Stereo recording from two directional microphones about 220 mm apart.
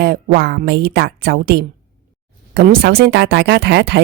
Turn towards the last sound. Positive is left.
turn(degrees=-50)  # may be behind; listen again after turning